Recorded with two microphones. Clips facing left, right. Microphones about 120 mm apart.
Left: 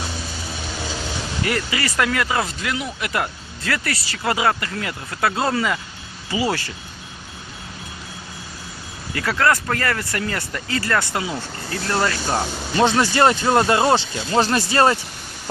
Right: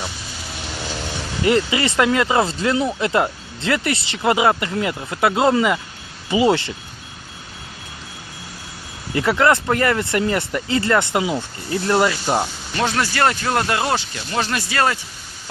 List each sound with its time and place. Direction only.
1.4 s speech: 20° right (ahead or behind)
9.1 s speech: 20° right (ahead or behind)
12.7 s speech: 25° left (ahead or behind)